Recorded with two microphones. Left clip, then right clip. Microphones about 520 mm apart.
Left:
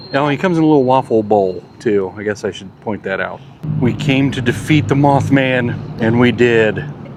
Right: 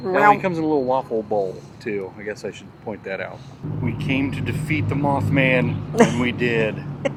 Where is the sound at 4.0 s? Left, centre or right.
Left.